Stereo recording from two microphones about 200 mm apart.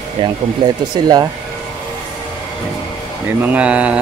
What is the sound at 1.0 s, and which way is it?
Speech, 20° right (ahead or behind).